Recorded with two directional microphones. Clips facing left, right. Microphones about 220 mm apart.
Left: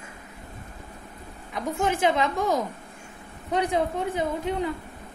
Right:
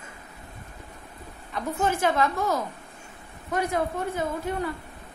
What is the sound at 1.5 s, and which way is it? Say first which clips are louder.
A woman's voice: even; 15° left (ahead or behind).